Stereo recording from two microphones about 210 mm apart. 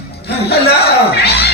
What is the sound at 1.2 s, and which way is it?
Music, 50° left (ahead or behind).